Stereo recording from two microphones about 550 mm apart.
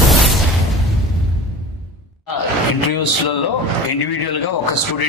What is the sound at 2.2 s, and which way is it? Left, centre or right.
A man's voice, left.